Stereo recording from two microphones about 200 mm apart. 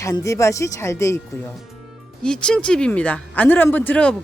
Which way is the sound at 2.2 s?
5° left (ahead or behind).